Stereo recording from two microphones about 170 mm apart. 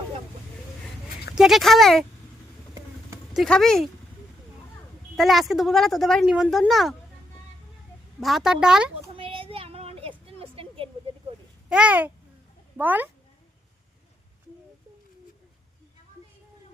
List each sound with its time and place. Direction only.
1.4 s speech: centre (ahead or behind)
3.3 s speech: centre (ahead or behind)
5.1 s speech: centre (ahead or behind)
8.2 s speech: centre (ahead or behind)
9.1 s a sound: 30° right (ahead or behind)
11.7 s a child's voice: 5° right (ahead or behind)